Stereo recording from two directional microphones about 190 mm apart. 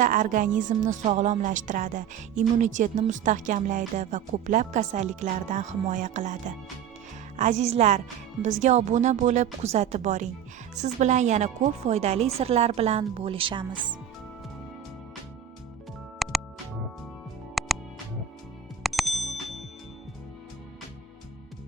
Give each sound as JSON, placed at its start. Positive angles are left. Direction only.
{"t": 0.0, "sound": "speech", "side_deg": -45}
{"t": 16.1, "sound": "music", "side_deg": 0}
{"t": 17.6, "sound": "music", "side_deg": 0}
{"t": 18.8, "sound": "music", "side_deg": 0}